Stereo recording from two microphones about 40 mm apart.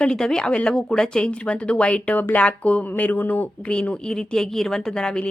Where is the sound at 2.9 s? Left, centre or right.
Left.